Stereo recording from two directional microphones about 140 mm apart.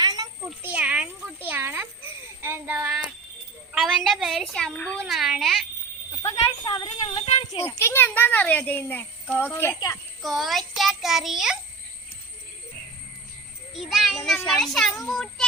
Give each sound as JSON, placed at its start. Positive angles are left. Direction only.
{"t": 0.0, "sound": "a sound", "side_deg": -30}
{"t": 0.6, "sound": "a sound", "side_deg": -10}
{"t": 3.7, "sound": "a woman's voice", "side_deg": -5}
{"t": 5.0, "sound": "a child's voice", "side_deg": 0}
{"t": 6.2, "sound": "speech", "side_deg": 30}
{"t": 7.2, "sound": "speech", "side_deg": 45}
{"t": 7.5, "sound": "a child's voice", "side_deg": 30}
{"t": 7.8, "sound": "a child's voice", "side_deg": 15}
{"t": 10.2, "sound": "a child's voice", "side_deg": 0}
{"t": 13.7, "sound": "a child's voice", "side_deg": 0}